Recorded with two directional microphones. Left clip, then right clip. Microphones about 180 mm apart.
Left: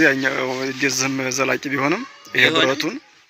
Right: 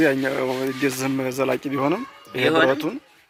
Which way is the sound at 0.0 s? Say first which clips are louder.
Left 3 dB; centre (ahead or behind).